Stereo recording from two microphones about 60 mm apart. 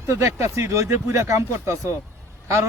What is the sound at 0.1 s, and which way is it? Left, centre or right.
Speech, right.